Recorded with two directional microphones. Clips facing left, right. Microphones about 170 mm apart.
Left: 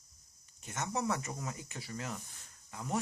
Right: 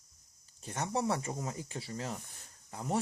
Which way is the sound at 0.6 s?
30° right (ahead or behind).